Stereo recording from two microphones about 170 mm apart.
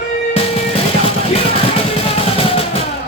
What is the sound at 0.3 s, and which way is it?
Music, 35° left (ahead or behind).